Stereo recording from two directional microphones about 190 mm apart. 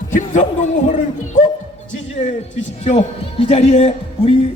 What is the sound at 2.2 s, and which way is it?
A man's voice, 35° left (ahead or behind).